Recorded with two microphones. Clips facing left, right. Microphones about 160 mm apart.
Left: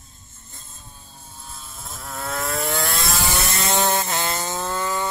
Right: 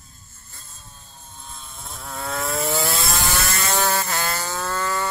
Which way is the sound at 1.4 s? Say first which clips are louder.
Even; 5° left (ahead or behind).